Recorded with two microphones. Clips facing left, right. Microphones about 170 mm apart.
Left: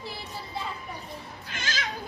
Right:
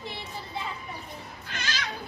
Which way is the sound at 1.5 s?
50° left (ahead or behind).